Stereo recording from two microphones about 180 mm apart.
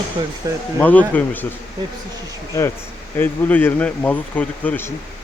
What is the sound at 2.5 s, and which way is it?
Speech, 15° left (ahead or behind).